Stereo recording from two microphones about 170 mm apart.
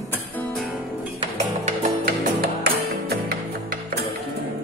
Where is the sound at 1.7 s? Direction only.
50° right (ahead or behind).